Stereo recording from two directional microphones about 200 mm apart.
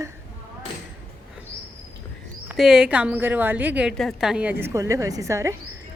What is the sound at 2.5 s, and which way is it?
A woman's voice, 5° right (ahead or behind).